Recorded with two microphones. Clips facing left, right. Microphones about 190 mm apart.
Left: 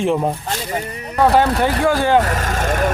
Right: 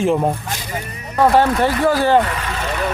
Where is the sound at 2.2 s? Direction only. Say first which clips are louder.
Left 2 dB; 40° left (ahead or behind).